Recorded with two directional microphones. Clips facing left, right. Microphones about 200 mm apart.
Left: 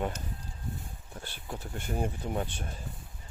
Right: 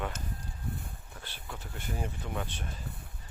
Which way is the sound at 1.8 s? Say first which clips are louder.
Left 5 dB; 55° left (ahead or behind).